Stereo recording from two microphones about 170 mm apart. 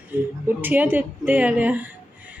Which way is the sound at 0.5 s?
10° right (ahead or behind).